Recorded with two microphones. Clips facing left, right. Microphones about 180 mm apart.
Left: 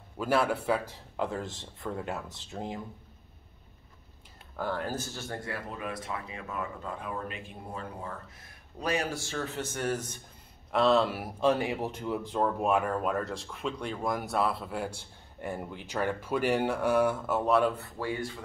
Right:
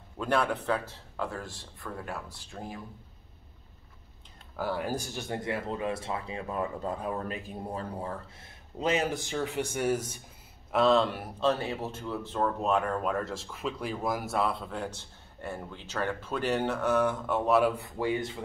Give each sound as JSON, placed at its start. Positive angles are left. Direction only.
{"t": 0.2, "sound": "speech", "side_deg": 5}
{"t": 4.6, "sound": "speech", "side_deg": -10}
{"t": 10.7, "sound": "speech", "side_deg": 0}